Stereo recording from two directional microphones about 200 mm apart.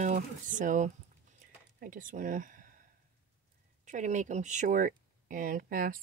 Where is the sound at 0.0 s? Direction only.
40° right (ahead or behind).